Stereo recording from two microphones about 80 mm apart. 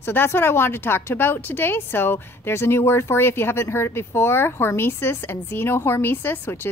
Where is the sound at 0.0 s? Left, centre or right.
Left.